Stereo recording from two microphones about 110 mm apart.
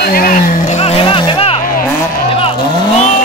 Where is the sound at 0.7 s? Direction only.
75° left (ahead or behind).